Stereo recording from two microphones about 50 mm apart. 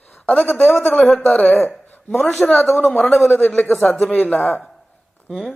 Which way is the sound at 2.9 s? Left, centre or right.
Left.